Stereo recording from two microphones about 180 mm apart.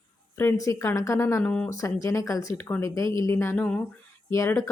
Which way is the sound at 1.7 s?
20° left (ahead or behind).